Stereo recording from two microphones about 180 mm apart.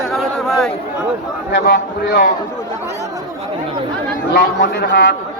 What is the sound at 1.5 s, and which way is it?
Speech, 70° left (ahead or behind).